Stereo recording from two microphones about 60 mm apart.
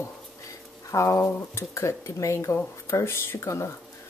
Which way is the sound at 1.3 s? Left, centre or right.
Left.